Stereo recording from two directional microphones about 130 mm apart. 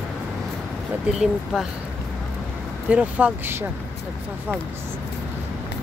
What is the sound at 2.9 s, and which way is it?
Speech, 10° right (ahead or behind).